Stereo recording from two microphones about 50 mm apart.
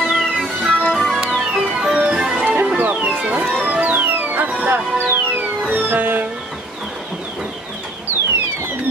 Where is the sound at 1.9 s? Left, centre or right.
Centre.